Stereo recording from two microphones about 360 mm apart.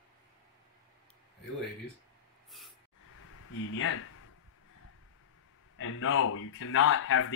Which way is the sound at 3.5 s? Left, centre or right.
Left.